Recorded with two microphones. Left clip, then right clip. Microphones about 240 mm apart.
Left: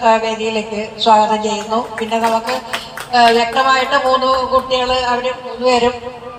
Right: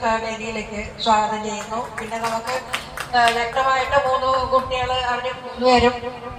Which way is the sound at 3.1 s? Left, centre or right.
Left.